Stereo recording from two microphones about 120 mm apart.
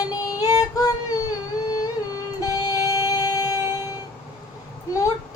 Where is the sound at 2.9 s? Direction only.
30° left (ahead or behind).